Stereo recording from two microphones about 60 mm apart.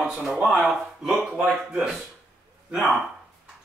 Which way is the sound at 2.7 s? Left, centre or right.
Centre.